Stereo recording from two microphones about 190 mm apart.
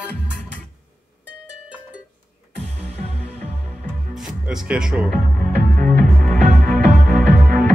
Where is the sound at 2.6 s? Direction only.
30° right (ahead or behind).